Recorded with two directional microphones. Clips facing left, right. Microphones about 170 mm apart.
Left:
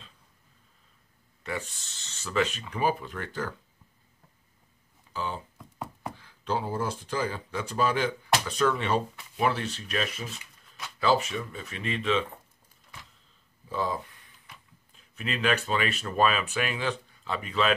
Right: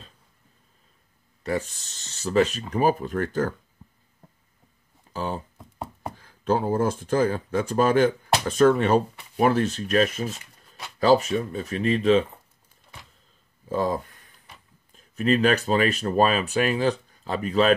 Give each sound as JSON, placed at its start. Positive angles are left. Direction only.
{"t": 1.4, "sound": "speech", "side_deg": -40}
{"t": 5.1, "sound": "speech", "side_deg": -45}
{"t": 5.6, "sound": "knock", "side_deg": -30}
{"t": 6.1, "sound": "speech", "side_deg": -45}
{"t": 13.7, "sound": "speech", "side_deg": -45}